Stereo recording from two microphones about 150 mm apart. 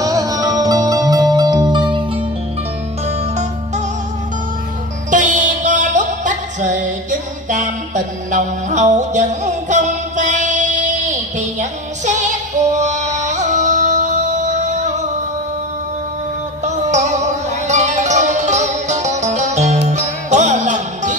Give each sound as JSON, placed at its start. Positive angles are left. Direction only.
{"t": 0.0, "sound": "music", "side_deg": -25}
{"t": 3.1, "sound": "music", "side_deg": -50}
{"t": 5.1, "sound": "music", "side_deg": -55}
{"t": 16.6, "sound": "music", "side_deg": -50}